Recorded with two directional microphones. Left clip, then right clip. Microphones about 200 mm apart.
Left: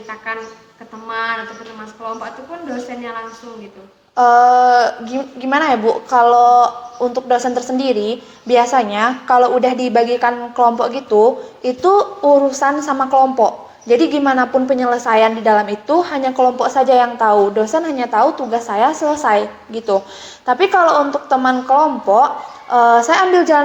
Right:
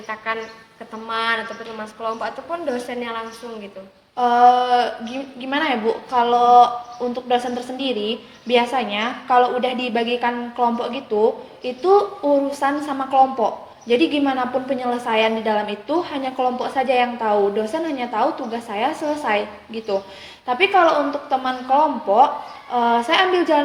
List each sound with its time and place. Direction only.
1.0 s speech: 55° right (ahead or behind)
4.1 s a woman's voice: 15° left (ahead or behind)
20.5 s a woman's voice: 15° left (ahead or behind)